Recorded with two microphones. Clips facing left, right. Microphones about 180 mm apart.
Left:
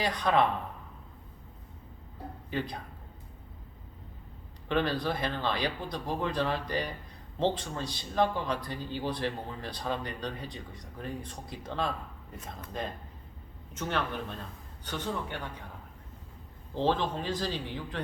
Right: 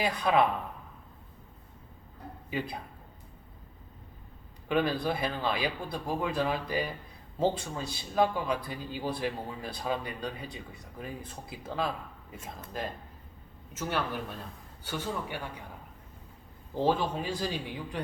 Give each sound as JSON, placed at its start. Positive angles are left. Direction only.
{"t": 0.0, "sound": "a man's voice", "side_deg": -5}
{"t": 2.5, "sound": "a man's voice", "side_deg": -10}
{"t": 4.7, "sound": "a man's voice", "side_deg": -10}
{"t": 16.7, "sound": "a man's voice", "side_deg": -10}